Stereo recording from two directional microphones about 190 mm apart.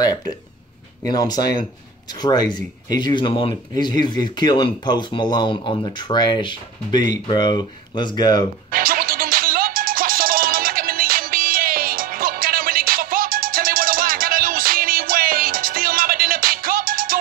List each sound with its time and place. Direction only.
0.0 s speech: 20° left (ahead or behind)
8.6 s music: 50° right (ahead or behind)